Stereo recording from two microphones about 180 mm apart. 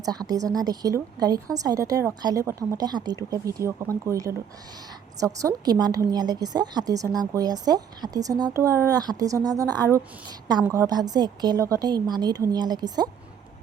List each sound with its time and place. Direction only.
0.0 s a woman's voice: 20° right (ahead or behind)